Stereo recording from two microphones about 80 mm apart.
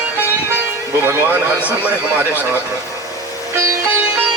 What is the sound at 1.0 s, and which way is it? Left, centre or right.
A man's voice, right.